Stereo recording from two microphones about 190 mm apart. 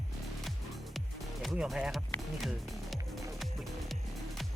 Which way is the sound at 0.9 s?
Centre (ahead or behind).